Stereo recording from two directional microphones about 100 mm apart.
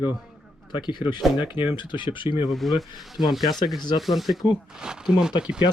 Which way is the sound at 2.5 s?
Centre (ahead or behind).